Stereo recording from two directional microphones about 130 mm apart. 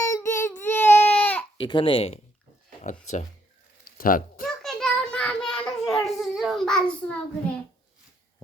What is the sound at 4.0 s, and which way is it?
Speech, 90° left.